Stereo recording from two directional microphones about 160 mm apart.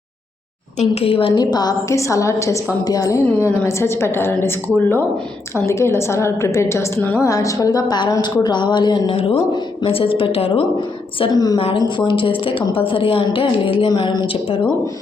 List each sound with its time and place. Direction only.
0.8 s a woman's voice: 40° left (ahead or behind)
1.3 s a woman's voice: 25° left (ahead or behind)
11.2 s a woman's voice: 25° left (ahead or behind)